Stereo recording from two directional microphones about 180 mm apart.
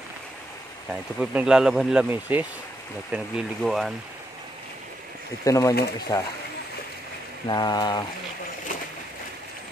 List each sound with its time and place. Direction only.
1.2 s speech: 5° right (ahead or behind)
5.4 s speech: 20° left (ahead or behind)
7.4 s speech: 25° left (ahead or behind)